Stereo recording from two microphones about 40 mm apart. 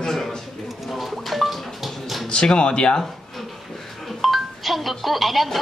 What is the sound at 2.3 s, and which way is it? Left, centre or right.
Speech, left.